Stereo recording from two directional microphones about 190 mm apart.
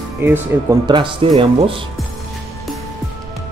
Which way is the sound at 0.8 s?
25° right (ahead or behind).